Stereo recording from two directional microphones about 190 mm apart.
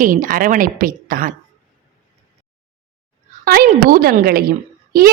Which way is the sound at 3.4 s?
50° right (ahead or behind).